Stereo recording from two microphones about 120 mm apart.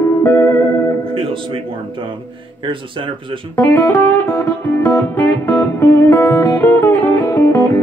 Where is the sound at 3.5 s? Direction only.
20° left (ahead or behind).